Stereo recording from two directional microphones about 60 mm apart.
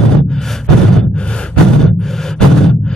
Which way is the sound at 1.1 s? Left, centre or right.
Centre.